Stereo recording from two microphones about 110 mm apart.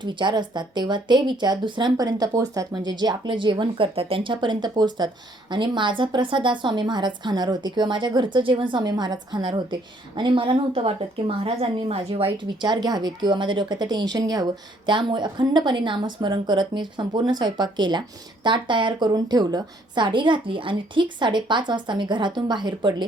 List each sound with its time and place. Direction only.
0.0 s speech: 45° right (ahead or behind)
8.8 s a woman's voice: 40° right (ahead or behind); by 12.5 s 60° right (ahead or behind)
12.6 s a woman's voice: 40° right (ahead or behind)